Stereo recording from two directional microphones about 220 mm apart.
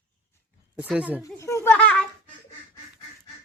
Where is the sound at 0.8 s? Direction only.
5° right (ahead or behind).